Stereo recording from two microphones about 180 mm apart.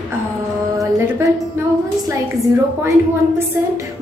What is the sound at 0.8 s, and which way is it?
A woman's voice, 15° right (ahead or behind).